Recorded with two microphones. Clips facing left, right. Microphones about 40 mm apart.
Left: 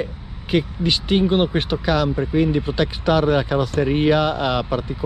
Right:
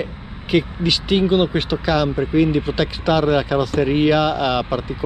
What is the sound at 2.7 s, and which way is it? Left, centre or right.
Speech, right.